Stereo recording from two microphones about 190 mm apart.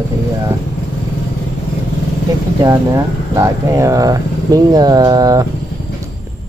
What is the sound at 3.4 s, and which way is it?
Speech, 15° right (ahead or behind).